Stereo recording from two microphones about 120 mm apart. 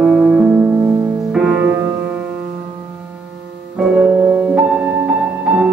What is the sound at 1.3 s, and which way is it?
Music, 10° right (ahead or behind).